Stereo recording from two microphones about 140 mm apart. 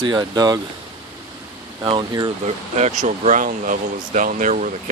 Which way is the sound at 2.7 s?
55° right (ahead or behind).